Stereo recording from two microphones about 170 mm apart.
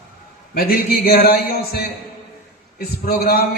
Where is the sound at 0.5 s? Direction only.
65° left (ahead or behind).